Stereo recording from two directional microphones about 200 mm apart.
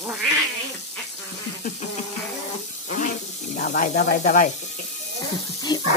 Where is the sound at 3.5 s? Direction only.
40° left (ahead or behind).